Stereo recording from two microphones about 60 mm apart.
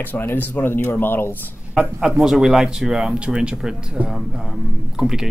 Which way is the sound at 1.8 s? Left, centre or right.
Centre.